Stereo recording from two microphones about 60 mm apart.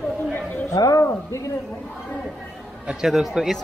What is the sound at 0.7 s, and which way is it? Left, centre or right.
Speech, left.